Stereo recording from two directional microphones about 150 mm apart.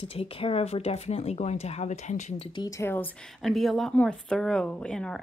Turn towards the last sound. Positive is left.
turn(degrees=5)  # may be behind; listen again after turning